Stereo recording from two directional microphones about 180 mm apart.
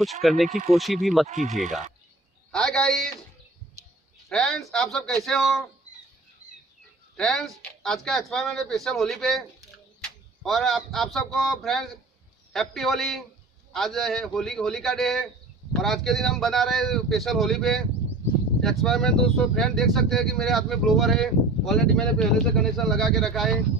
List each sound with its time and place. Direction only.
0.0 s speech: centre (ahead or behind)
1.2 s speech: 45° right (ahead or behind)
2.5 s speech: 5° left (ahead or behind)
4.3 s speech: 5° left (ahead or behind)
7.2 s speech: centre (ahead or behind)